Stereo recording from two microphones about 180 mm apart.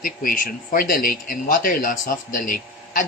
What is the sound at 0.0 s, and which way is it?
Speech, 50° left (ahead or behind).